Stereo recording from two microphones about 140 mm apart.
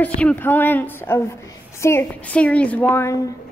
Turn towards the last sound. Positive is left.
turn(degrees=15)  # may be behind; listen again after turning